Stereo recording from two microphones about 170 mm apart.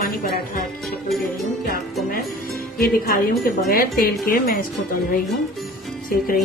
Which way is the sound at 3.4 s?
55° left (ahead or behind).